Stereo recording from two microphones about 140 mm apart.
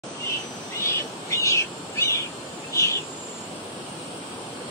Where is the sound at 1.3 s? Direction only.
20° left (ahead or behind).